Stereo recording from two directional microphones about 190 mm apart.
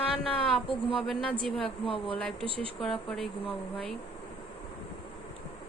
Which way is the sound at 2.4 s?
30° right (ahead or behind).